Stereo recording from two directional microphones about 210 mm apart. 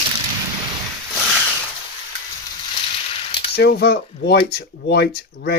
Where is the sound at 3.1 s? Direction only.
25° left (ahead or behind).